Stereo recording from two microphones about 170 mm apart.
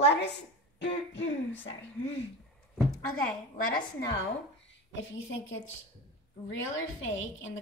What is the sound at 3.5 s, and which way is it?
Speech, 55° left (ahead or behind).